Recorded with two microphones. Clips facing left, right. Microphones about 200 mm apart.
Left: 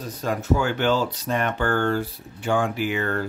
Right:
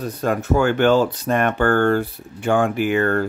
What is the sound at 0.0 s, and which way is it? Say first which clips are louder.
Speech: right 5 dB; 60° right (ahead or behind).